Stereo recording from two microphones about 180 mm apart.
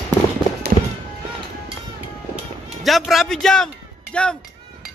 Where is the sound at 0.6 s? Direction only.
60° right (ahead or behind).